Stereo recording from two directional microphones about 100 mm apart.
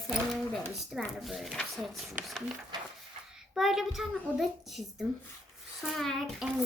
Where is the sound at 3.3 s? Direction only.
5° right (ahead or behind).